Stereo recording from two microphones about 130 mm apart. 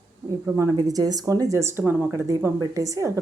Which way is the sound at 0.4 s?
20° right (ahead or behind).